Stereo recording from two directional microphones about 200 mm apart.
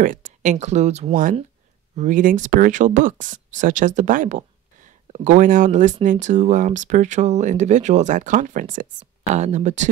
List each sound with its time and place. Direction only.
0.0 s speech: 40° right (ahead or behind)